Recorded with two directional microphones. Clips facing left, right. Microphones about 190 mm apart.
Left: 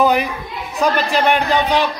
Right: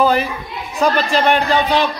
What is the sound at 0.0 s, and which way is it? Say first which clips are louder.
Children playing: even; 15° left (ahead or behind).